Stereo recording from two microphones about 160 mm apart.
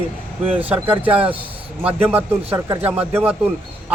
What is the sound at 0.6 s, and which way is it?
Speech, 10° right (ahead or behind).